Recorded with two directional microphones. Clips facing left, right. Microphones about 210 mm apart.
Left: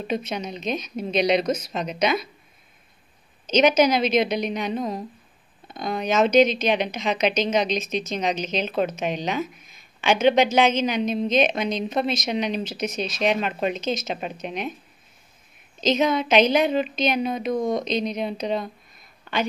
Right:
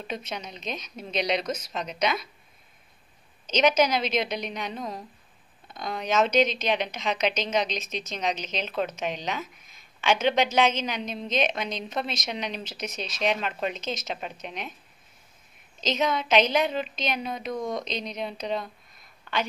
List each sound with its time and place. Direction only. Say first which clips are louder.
0.1 s a woman's voice: left 8 dB; 10° left (ahead or behind)
3.4 s a woman's voice: left 4 dB; 10° left (ahead or behind)
15.8 s a woman's voice: left 6 dB; 10° left (ahead or behind)
17.5 s speech: left 6 dB; 25° left (ahead or behind)
17.8 s a woman's voice: left 7 dB; 10° left (ahead or behind)